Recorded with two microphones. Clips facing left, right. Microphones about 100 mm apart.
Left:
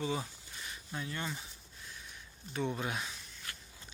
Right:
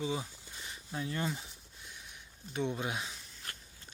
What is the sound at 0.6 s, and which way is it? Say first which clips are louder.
Speech: right 3 dB; 30° right (ahead or behind).